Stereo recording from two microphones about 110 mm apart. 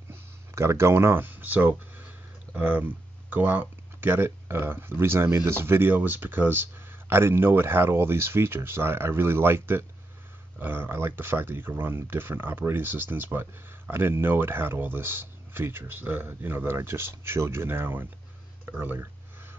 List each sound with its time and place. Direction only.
0.1 s speech: 25° right (ahead or behind)